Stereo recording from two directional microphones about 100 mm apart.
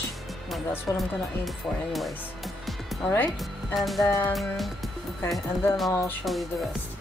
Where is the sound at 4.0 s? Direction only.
30° left (ahead or behind).